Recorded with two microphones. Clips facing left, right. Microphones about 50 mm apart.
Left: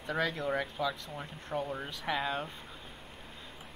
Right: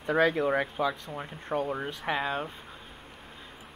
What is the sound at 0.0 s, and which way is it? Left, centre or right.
Speech, right.